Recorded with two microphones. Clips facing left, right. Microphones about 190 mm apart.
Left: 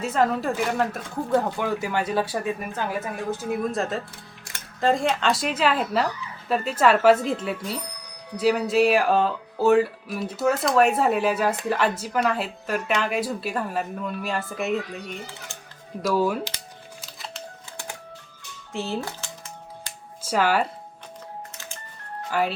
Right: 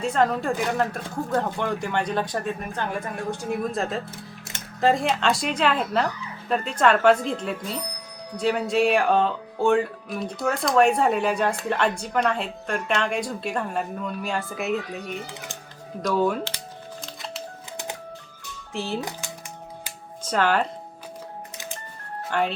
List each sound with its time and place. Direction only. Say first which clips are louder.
0.0 s speech: even; 5° left (ahead or behind)
16.0 s speech: even; 5° left (ahead or behind)
17.0 s a sound: right 2 dB; centre (ahead or behind)
18.7 s speech: even; centre (ahead or behind)
18.9 s speech: even; 15° right (ahead or behind)
20.2 s speech: even; 10° left (ahead or behind)
22.3 s speech: even; 5° left (ahead or behind)